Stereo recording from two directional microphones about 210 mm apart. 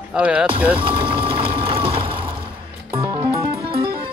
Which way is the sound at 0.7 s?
25° right (ahead or behind).